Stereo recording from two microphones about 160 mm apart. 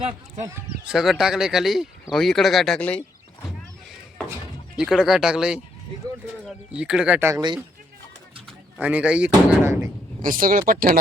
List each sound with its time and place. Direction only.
0.0 s speech: 40° right (ahead or behind)
0.9 s speech: centre (ahead or behind)
4.8 s speech: 5° right (ahead or behind)
6.7 s speech: 5° right (ahead or behind)
8.8 s speech: 10° right (ahead or behind)
10.2 s speech: 60° right (ahead or behind)